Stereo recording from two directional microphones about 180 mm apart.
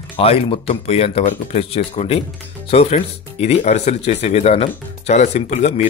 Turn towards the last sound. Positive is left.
turn(degrees=40)  # may be behind; listen again after turning